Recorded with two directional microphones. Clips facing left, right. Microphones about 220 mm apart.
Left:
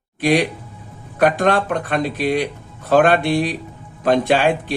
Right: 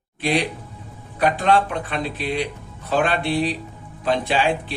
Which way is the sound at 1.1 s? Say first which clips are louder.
Left 3 dB; 50° left (ahead or behind).